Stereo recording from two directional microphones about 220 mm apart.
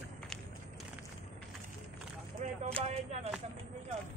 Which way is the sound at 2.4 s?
35° right (ahead or behind).